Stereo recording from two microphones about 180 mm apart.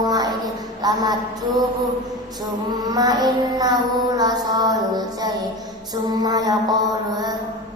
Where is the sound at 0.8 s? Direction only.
20° right (ahead or behind).